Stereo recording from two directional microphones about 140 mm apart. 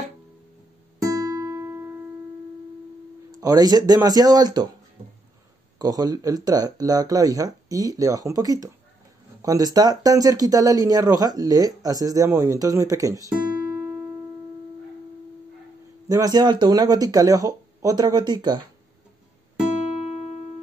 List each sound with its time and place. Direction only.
1.1 s music: 25° right (ahead or behind)
3.3 s speech: 25° right (ahead or behind)
5.8 s speech: 25° right (ahead or behind)
16.1 s speech: 25° right (ahead or behind)
20.1 s music: 50° left (ahead or behind)